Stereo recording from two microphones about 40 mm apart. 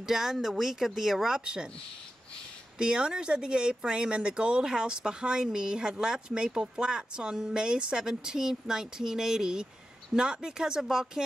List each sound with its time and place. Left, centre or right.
0.0 s speech: centre
2.8 s speech: right